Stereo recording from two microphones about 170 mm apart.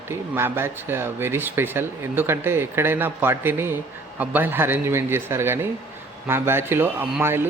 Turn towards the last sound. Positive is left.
turn(degrees=-15)  # may be behind; listen again after turning